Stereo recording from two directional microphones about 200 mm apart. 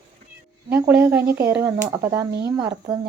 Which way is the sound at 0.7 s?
5° right (ahead or behind).